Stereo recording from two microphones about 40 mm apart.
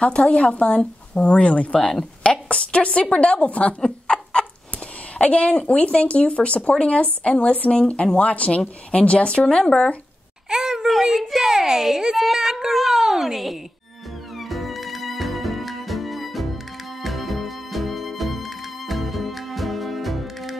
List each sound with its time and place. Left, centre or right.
0.0 s speech: left
1.7 s speech: left
3.8 s chicken: left
5.2 s speech: left
10.5 s a sound: centre
11.1 s a child's voice: centre
14.4 s music: centre